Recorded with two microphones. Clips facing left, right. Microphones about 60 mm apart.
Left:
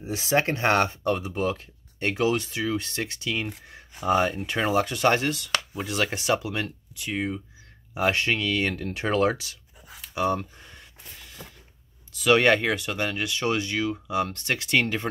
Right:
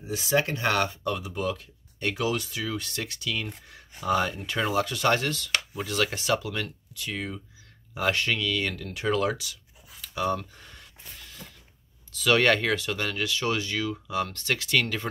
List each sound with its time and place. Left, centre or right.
0.1 s speech: left
10.0 s a sound: left
12.2 s speech: centre